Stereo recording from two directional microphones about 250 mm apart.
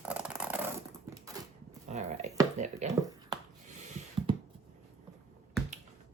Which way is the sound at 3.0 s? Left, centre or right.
Centre.